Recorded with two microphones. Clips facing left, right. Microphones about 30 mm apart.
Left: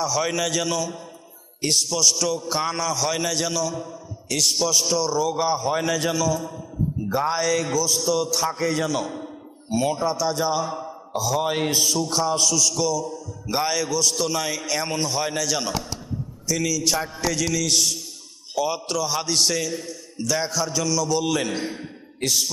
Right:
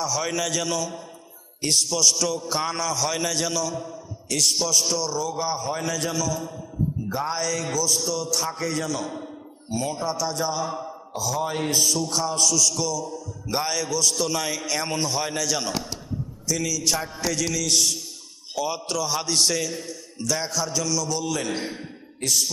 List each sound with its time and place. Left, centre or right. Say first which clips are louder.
0.0 s a man's voice: left 3 dB; centre
7.1 s a man's voice: left 7 dB; centre
9.6 s a man's voice: left 4 dB; centre
10.7 s speech: left 1 dB; centre
11.3 s a man's voice: left 3 dB; centre
11.7 s a man's voice: left 1 dB; centre
21.5 s a man's voice: left 1 dB; centre